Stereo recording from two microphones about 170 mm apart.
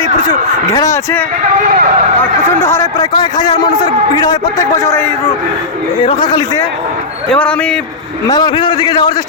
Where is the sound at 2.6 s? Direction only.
15° left (ahead or behind).